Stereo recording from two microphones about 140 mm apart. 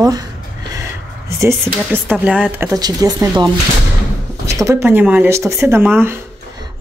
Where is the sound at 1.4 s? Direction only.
20° right (ahead or behind).